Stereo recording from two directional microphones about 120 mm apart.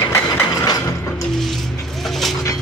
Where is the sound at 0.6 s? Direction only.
35° left (ahead or behind).